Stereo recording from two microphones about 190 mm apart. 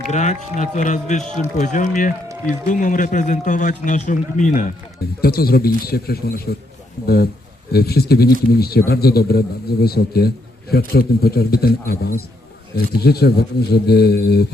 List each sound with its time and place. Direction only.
0.0 s a man's voice: 40° left (ahead or behind)
5.2 s a man's voice: 55° left (ahead or behind)
7.7 s a man's voice: 55° left (ahead or behind)